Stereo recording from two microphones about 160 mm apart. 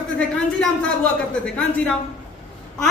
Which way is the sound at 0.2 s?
5° left (ahead or behind).